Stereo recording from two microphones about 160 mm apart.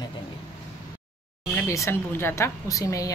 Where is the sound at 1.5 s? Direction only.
15° left (ahead or behind).